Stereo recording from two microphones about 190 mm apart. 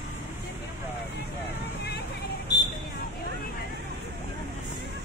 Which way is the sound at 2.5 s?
20° left (ahead or behind).